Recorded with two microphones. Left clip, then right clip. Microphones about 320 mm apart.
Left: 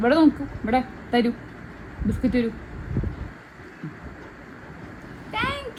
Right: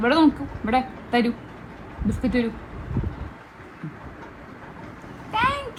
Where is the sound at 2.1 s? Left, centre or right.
Right.